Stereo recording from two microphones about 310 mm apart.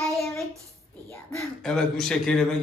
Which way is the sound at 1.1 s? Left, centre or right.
Centre.